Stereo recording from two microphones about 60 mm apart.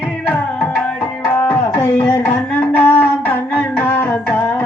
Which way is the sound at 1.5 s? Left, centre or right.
Left.